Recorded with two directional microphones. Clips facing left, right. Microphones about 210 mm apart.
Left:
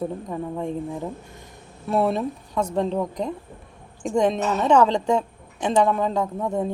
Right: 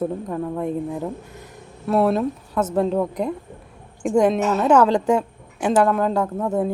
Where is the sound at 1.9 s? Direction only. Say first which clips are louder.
Right 3 dB; centre (ahead or behind).